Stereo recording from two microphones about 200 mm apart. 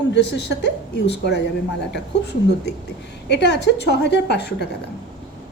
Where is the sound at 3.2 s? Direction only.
60° left (ahead or behind).